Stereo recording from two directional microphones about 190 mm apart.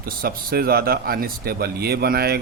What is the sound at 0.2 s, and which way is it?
Speech, 55° right (ahead or behind).